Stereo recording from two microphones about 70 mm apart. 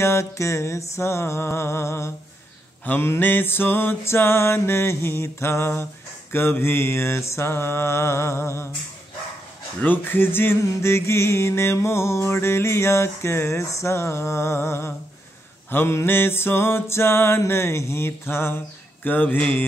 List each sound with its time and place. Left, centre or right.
0.0 s music: left
9.8 s music: left
19.0 s mantra: left